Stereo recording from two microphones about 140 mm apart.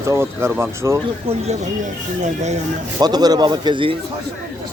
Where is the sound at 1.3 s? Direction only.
55° right (ahead or behind).